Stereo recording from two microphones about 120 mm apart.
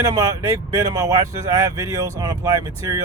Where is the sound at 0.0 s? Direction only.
30° right (ahead or behind).